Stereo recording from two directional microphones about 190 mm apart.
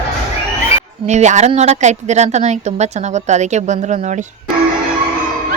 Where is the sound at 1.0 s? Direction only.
40° right (ahead or behind).